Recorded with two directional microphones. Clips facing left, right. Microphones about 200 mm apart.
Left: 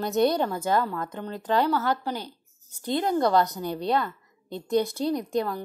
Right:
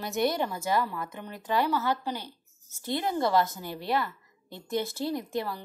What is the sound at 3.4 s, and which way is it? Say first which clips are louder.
Speech: left 6 dB; 20° left (ahead or behind).